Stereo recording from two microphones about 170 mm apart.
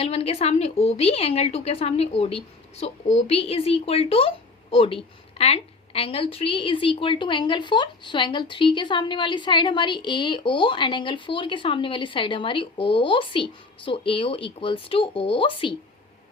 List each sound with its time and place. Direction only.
0.0 s a woman's voice: 35° left (ahead or behind)